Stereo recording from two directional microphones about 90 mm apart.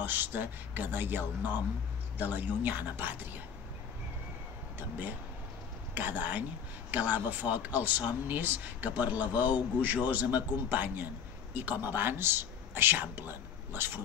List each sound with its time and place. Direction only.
0.0 s speech: 20° right (ahead or behind)
4.7 s speech: 20° right (ahead or behind)